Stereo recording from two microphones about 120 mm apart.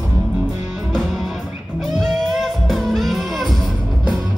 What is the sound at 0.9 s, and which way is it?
Music, centre (ahead or behind).